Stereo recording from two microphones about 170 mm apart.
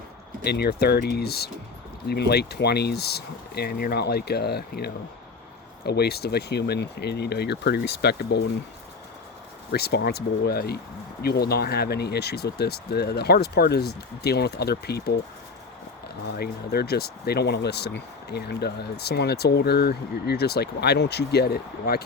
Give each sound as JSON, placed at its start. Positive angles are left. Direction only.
{"t": 0.4, "sound": "speech", "side_deg": 70}
{"t": 9.7, "sound": "speech", "side_deg": 70}
{"t": 16.2, "sound": "speech", "side_deg": 70}